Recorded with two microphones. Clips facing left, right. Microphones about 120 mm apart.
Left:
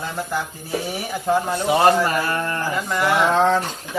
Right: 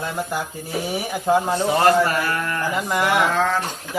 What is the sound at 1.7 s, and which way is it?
Speech, 20° left (ahead or behind).